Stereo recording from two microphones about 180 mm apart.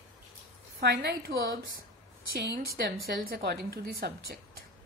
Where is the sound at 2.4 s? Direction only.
60° right (ahead or behind).